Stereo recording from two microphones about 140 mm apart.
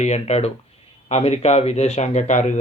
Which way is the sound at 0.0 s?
50° left (ahead or behind).